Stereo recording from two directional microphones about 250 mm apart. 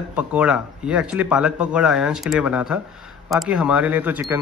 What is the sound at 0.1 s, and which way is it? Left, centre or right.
Speech, centre.